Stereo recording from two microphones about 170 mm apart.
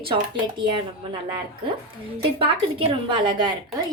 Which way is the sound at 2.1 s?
30° right (ahead or behind).